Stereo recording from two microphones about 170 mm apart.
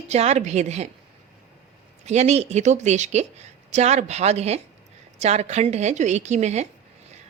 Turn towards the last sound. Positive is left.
turn(degrees=-40)  # may be behind; listen again after turning